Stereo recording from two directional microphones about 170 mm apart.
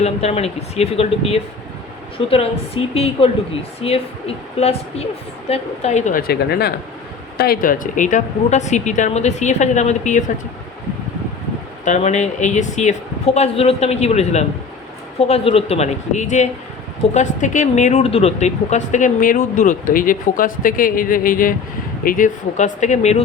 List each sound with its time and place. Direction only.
0.0 s a woman's voice: 40° left (ahead or behind)
11.9 s speech: 40° left (ahead or behind)